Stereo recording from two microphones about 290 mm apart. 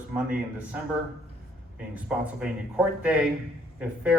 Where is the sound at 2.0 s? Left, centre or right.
Centre.